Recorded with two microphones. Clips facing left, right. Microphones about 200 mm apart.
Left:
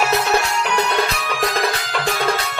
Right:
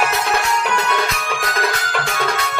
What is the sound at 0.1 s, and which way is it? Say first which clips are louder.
Music: left 1 dB; 35° left (ahead or behind).